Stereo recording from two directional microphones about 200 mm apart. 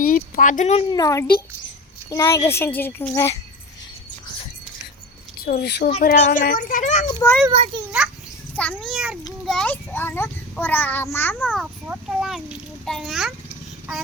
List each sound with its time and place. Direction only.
0.0 s speech: 40° left (ahead or behind)
0.9 s a child's voice: 15° left (ahead or behind)
5.5 s a child's voice: 55° left (ahead or behind); by 7.1 s 40° left (ahead or behind)
7.5 s a child's voice: 30° right (ahead or behind)
8.5 s a child's voice: 5° left (ahead or behind)
11.6 s a child's voice: 5° right (ahead or behind)